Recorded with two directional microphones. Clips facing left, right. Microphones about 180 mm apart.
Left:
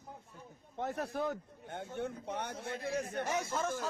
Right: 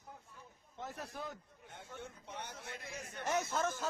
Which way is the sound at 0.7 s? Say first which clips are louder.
Left 9 dB; 60° left (ahead or behind).